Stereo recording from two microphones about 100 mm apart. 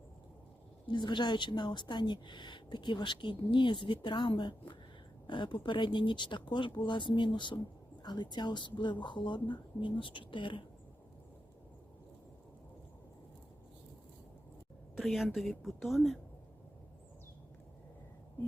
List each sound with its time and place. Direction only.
0.9 s speech: 50° left (ahead or behind)
14.9 s speech: centre (ahead or behind)